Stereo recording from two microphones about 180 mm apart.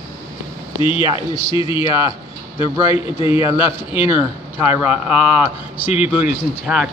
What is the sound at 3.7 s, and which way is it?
Speech, 10° right (ahead or behind).